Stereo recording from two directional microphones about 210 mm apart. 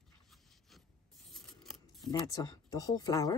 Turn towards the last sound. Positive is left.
turn(degrees=15)  # may be behind; listen again after turning